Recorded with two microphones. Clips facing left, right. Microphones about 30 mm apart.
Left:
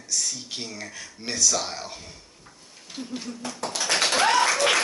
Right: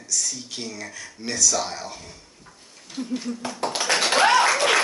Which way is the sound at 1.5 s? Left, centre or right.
Centre.